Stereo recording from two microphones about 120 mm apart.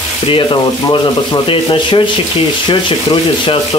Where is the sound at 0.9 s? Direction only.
40° left (ahead or behind).